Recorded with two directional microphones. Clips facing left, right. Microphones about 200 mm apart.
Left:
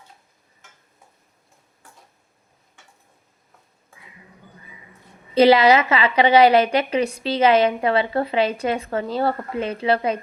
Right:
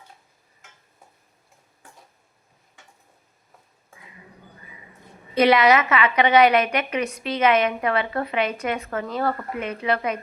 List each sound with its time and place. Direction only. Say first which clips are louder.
5.3 s a woman's voice: left 3 dB; 30° left (ahead or behind)